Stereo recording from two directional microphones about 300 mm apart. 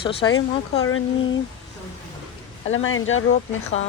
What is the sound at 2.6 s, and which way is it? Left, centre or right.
Speech, left.